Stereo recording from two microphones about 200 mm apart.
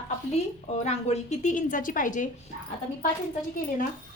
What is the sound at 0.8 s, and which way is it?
A woman's voice, 35° left (ahead or behind).